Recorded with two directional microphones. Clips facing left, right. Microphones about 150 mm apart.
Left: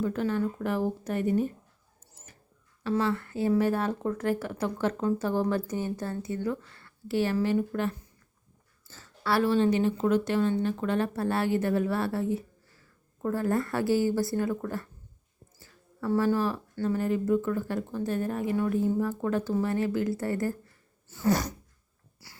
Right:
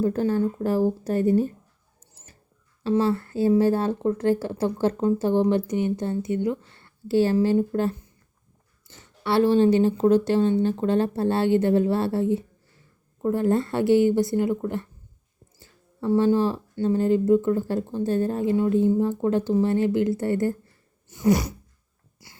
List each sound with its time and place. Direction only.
0.0 s speech: 35° right (ahead or behind)
2.8 s speech: 30° right (ahead or behind)
8.9 s speech: 20° right (ahead or behind)
21.1 s a sound: 15° right (ahead or behind)
22.2 s wheeze: 20° right (ahead or behind)